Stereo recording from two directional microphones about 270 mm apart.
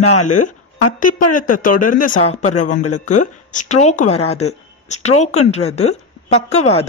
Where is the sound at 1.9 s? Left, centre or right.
Left.